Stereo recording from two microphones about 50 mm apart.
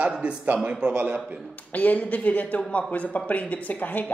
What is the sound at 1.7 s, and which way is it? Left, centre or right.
A man's voice, left.